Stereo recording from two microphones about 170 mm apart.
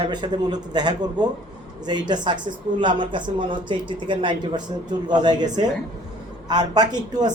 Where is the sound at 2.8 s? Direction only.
30° right (ahead or behind).